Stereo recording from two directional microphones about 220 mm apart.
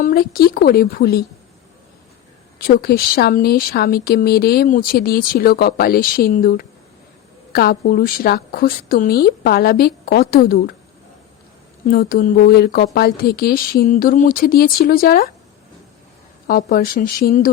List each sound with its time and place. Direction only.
0.0 s speech: 40° left (ahead or behind)
2.6 s speech: 45° left (ahead or behind)
11.9 s speech: 40° left (ahead or behind)
16.5 s speech: 40° left (ahead or behind)